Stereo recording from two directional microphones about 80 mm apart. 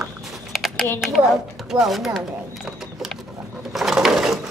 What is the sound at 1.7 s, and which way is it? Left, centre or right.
Speech, centre.